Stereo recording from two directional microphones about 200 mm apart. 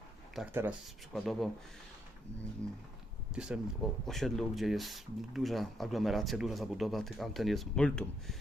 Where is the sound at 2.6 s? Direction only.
5° left (ahead or behind).